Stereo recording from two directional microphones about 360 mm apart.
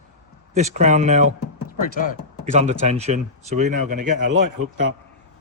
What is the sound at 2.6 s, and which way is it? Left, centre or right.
Speech, centre.